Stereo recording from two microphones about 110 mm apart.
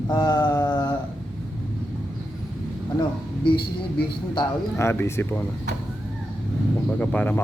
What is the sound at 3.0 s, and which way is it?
Speech, 45° left (ahead or behind).